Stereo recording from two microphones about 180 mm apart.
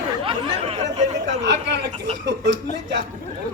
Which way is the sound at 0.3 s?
35° right (ahead or behind).